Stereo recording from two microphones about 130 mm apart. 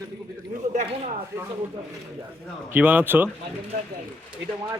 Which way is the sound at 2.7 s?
15° right (ahead or behind).